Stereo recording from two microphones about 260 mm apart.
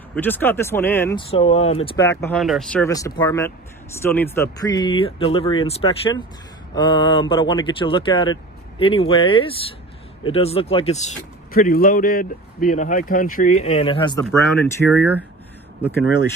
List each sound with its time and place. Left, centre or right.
0.1 s speech: centre
1.3 s speech: left; by 2.8 s centre
2.8 s speech: centre
14.9 s speech: centre